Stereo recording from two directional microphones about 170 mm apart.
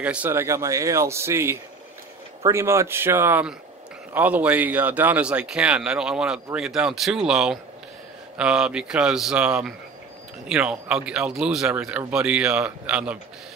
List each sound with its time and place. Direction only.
0.0 s speech: 10° right (ahead or behind)